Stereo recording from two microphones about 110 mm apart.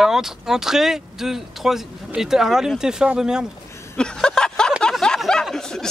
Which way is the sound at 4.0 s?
5° left (ahead or behind).